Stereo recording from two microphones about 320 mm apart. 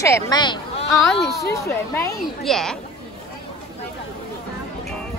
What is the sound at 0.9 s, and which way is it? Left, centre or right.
A woman's voice, centre.